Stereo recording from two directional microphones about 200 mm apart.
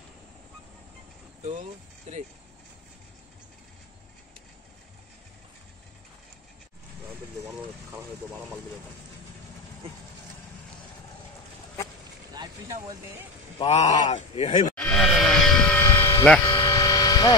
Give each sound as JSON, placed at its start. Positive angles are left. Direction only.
{"t": 1.4, "sound": "speech", "side_deg": -35}
{"t": 13.6, "sound": "speech", "side_deg": 35}
{"t": 14.8, "sound": "a sound", "side_deg": 5}